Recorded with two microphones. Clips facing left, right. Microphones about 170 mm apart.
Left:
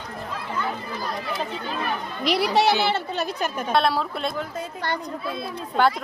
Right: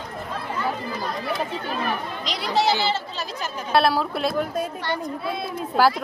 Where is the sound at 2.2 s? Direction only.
65° left (ahead or behind).